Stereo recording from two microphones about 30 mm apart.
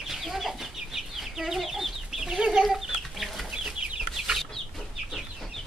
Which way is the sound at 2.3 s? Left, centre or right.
Right.